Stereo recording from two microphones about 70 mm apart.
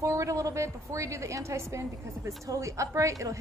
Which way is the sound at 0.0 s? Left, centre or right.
Right.